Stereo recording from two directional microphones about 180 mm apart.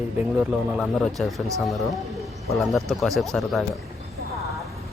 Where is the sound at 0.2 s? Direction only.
5° right (ahead or behind).